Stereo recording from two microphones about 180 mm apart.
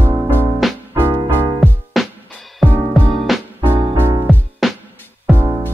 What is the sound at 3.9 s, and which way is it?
Music, 10° right (ahead or behind).